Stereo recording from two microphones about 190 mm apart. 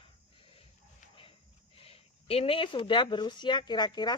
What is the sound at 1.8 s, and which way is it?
Speech, 30° left (ahead or behind).